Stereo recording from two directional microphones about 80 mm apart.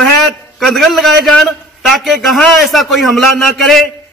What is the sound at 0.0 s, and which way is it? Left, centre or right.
A man's voice, centre.